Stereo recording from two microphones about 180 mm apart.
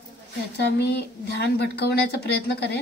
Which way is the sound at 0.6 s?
65° left (ahead or behind).